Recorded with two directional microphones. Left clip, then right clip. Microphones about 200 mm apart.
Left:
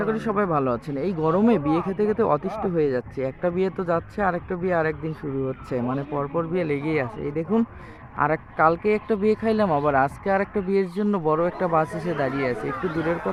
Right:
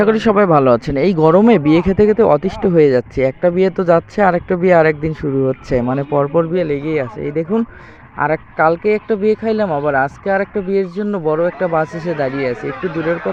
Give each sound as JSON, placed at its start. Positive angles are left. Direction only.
{"t": 0.0, "sound": "speech", "side_deg": -35}
{"t": 7.2, "sound": "speech", "side_deg": -20}